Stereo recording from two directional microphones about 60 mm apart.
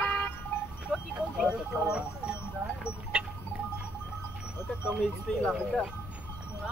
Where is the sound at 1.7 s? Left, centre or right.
Centre.